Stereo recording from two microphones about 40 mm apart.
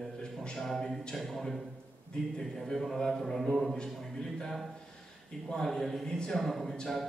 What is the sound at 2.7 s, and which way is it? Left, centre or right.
A man's voice, centre.